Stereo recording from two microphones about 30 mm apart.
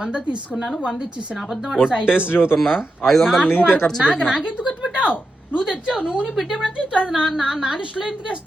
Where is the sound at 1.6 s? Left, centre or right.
Centre.